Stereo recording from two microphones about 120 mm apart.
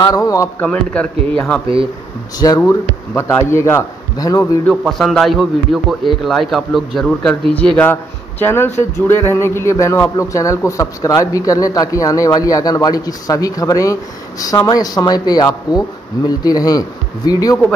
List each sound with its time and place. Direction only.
0.0 s a man's voice: 30° left (ahead or behind)
0.6 s speech: 10° left (ahead or behind)
2.3 s a man's voice: 30° left (ahead or behind)
4.6 s a man's voice: centre (ahead or behind); by 17.6 s 30° left (ahead or behind)